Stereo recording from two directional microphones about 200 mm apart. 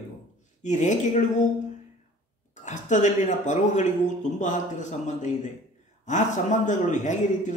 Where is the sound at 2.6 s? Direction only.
35° left (ahead or behind).